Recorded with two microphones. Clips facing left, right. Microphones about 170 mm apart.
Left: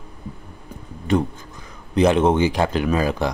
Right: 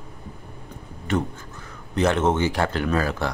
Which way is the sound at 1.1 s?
15° left (ahead or behind).